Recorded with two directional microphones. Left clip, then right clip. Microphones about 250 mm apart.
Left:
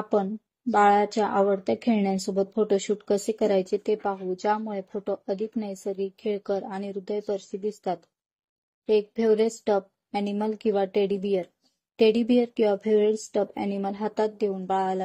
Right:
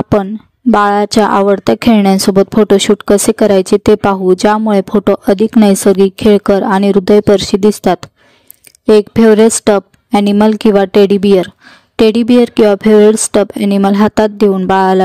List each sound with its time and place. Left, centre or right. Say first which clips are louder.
0.1 s a woman's voice: right 11 dB; right